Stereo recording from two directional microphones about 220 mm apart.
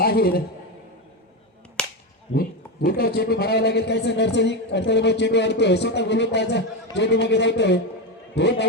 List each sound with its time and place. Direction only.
0.0 s a man's voice: 45° left (ahead or behind)
1.8 s whip: 5° left (ahead or behind)
2.3 s a man's voice: 45° left (ahead or behind)